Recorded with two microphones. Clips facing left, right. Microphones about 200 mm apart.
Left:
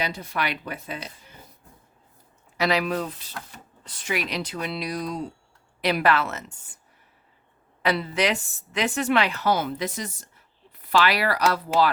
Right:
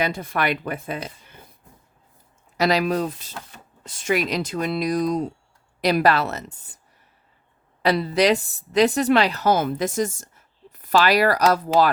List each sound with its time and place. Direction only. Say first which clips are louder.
0.0 s speech: right 5 dB; 55° right (ahead or behind)
2.6 s speech: right 4 dB; 40° right (ahead or behind)
7.8 s speech: right 5 dB; 35° right (ahead or behind)